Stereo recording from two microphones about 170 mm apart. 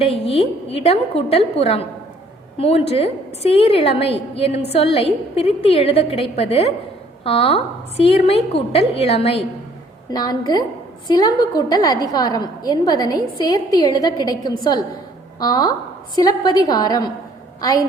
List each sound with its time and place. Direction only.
0.0 s a woman's voice: 35° left (ahead or behind)
10.1 s a woman's voice: 25° left (ahead or behind)